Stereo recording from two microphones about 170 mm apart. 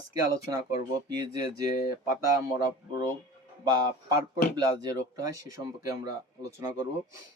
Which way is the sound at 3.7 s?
25° right (ahead or behind).